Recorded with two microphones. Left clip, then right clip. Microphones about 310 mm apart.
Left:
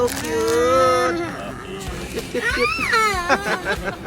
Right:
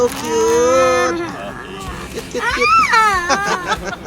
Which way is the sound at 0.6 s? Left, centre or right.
Centre.